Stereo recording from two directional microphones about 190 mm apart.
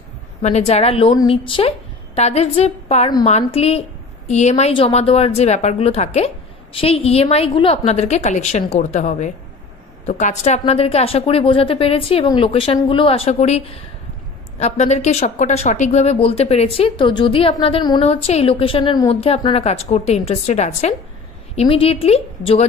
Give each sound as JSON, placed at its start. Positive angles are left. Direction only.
{"t": 0.4, "sound": "a woman's voice", "side_deg": 35}
{"t": 14.6, "sound": "speech", "side_deg": 35}